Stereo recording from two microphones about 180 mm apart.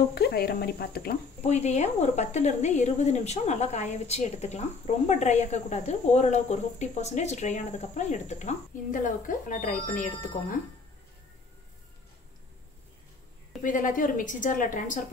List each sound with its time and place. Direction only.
0.1 s speech: 60° left (ahead or behind)
1.4 s speech: 40° left (ahead or behind)
13.6 s a woman's voice: 45° left (ahead or behind)